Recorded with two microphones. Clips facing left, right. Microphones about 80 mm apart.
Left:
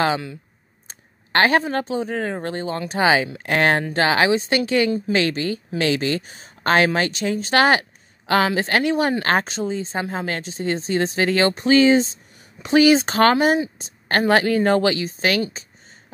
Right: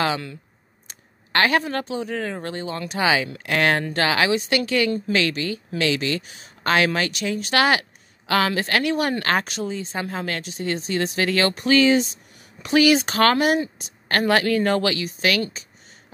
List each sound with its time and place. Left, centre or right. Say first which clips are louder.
0.8 s speech: left 2 dB; left